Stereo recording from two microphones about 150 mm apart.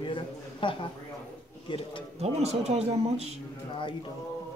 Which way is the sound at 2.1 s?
45° right (ahead or behind).